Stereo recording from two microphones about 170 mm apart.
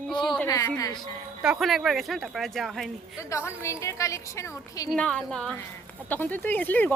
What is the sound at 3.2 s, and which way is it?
A woman's voice, 15° left (ahead or behind).